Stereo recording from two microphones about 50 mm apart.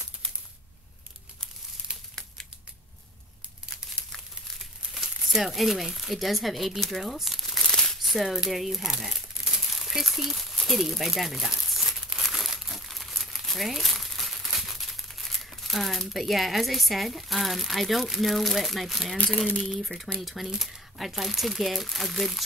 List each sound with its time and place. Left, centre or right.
3.8 s crumpling: centre
4.6 s speech: centre
8.0 s crumpling: centre
19.6 s speech: centre